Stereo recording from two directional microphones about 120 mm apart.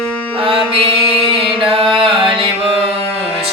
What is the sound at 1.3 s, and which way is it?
Music, 50° right (ahead or behind).